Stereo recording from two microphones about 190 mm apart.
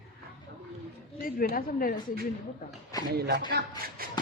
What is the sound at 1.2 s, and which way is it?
Speech, 45° left (ahead or behind).